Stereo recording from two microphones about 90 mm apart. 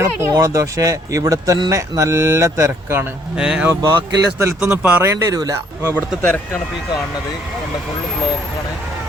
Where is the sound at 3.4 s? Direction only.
10° right (ahead or behind).